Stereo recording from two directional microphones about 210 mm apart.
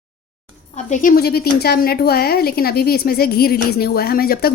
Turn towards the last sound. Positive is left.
turn(degrees=45)  # may be behind; listen again after turning